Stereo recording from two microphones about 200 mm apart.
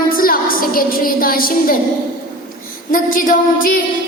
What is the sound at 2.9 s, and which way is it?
Music, 45° left (ahead or behind).